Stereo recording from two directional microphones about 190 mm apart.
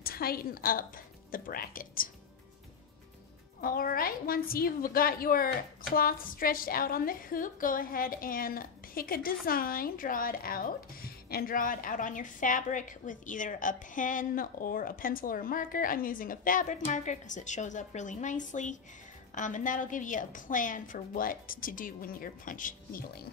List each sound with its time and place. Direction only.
0.0 s a woman's voice: 50° left (ahead or behind)
3.6 s a woman's voice: 50° left (ahead or behind)